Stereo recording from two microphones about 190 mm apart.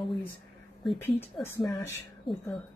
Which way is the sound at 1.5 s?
15° left (ahead or behind).